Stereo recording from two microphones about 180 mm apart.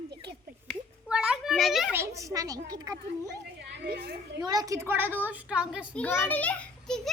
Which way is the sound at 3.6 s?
60° right (ahead or behind).